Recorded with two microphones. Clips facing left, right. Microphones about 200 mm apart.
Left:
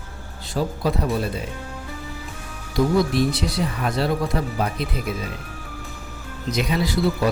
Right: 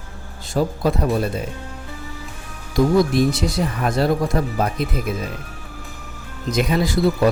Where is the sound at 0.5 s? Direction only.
45° right (ahead or behind).